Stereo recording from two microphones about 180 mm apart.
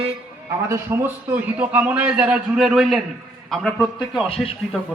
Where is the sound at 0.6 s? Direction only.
15° right (ahead or behind).